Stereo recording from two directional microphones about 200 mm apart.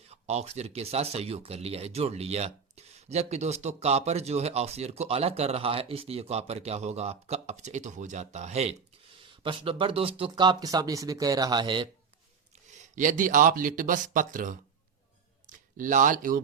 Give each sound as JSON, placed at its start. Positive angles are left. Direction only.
{"t": 0.1, "sound": "speech", "side_deg": -30}
{"t": 12.7, "sound": "speech", "side_deg": -40}
{"t": 15.5, "sound": "speech", "side_deg": -40}